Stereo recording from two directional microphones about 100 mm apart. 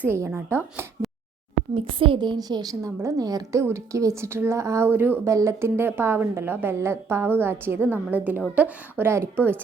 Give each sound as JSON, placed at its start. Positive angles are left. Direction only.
{"t": 0.0, "sound": "a woman's voice", "side_deg": -20}
{"t": 1.7, "sound": "a woman's voice", "side_deg": -65}